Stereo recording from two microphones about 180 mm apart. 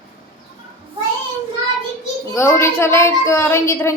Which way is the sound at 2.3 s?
15° left (ahead or behind).